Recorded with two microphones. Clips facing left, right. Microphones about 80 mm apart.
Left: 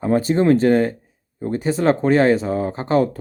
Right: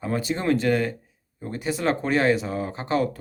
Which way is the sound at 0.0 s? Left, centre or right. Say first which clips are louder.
Left 9 dB; left.